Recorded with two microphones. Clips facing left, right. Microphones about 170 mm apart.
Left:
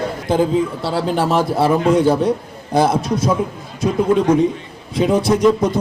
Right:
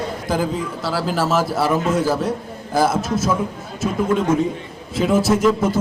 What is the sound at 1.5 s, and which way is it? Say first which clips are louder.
Speech: left 4 dB; 30° left (ahead or behind).